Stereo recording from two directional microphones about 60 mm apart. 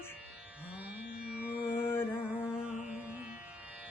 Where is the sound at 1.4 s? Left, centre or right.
Right.